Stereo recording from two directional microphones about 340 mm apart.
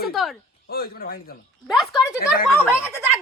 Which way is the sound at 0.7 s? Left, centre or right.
Left.